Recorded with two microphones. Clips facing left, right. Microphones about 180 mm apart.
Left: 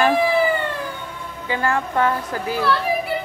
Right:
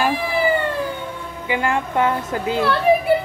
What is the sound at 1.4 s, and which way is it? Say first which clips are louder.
A child's voice: right 1 dB; 15° right (ahead or behind).